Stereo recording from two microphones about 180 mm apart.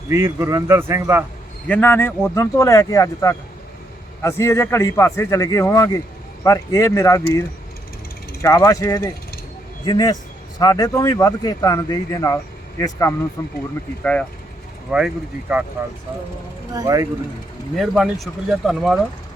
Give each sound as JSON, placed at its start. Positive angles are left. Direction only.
{"t": 0.1, "sound": "a man's voice", "side_deg": -15}
{"t": 1.6, "sound": "a man's voice", "side_deg": 10}
{"t": 14.8, "sound": "speech", "side_deg": -5}
{"t": 16.7, "sound": "speech", "side_deg": -20}
{"t": 17.7, "sound": "speech", "side_deg": 0}